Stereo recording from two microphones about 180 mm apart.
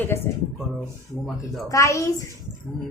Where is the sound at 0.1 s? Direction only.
15° left (ahead or behind).